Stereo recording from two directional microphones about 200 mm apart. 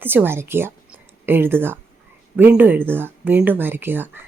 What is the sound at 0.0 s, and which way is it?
A woman's voice, 10° right (ahead or behind).